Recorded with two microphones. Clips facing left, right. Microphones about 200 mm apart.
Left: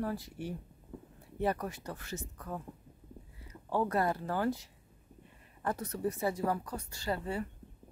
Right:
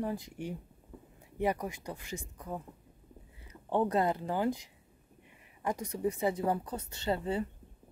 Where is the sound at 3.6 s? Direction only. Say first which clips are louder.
Right 2 dB; 20° right (ahead or behind).